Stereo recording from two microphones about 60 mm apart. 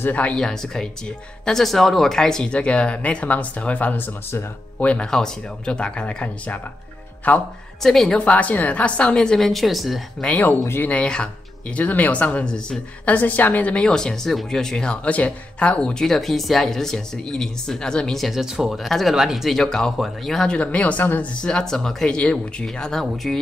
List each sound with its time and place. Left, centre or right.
0.1 s speech: left
0.4 s speech: centre; by 7.4 s left
7.8 s speech: centre
8.2 s speech: left; by 10.0 s centre
10.2 s speech: left
13.0 s speech: left
13.8 s speech: centre
19.6 s speech: centre
20.4 s speech: centre
21.4 s speech: centre